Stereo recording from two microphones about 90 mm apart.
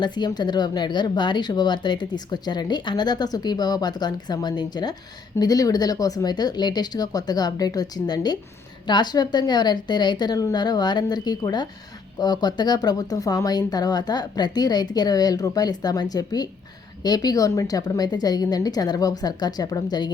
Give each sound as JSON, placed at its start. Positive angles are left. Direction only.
{"t": 0.0, "sound": "speech", "side_deg": 55}